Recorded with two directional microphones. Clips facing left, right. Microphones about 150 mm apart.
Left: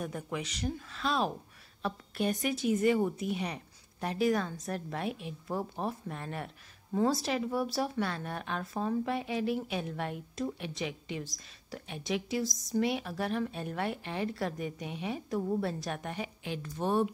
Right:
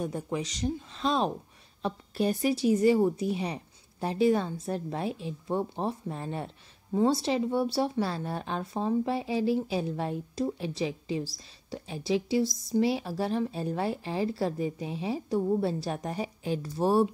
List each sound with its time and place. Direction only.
0.0 s speech: 30° right (ahead or behind)
12.4 s speech: centre (ahead or behind)
12.7 s speech: 30° right (ahead or behind)